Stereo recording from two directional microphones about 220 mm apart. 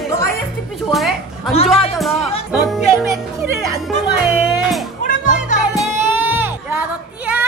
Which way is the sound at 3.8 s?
Centre (ahead or behind).